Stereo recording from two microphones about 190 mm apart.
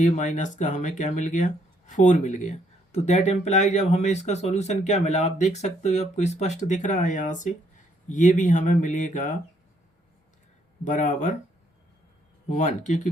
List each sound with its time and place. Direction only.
0.0 s speech: 40° left (ahead or behind)
10.8 s speech: 40° left (ahead or behind)
12.5 s speech: 40° left (ahead or behind)